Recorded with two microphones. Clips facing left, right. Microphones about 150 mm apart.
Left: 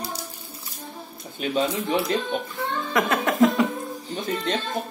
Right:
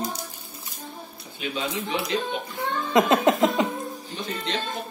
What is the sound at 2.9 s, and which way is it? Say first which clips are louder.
Speech: right 5 dB; 20° right (ahead or behind).